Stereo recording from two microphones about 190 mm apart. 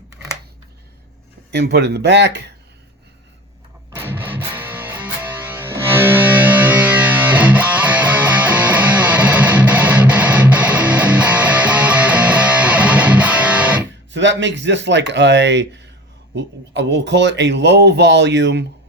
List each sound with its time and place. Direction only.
1.5 s a man's voice: 60° right (ahead or behind)
3.9 s music: 10° right (ahead or behind)
14.1 s a man's voice: 70° right (ahead or behind)